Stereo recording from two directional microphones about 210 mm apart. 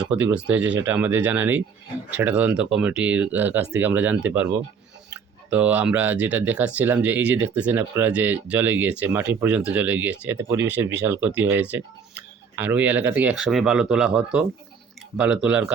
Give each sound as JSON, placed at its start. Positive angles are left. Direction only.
{"t": 0.0, "sound": "speech", "side_deg": -5}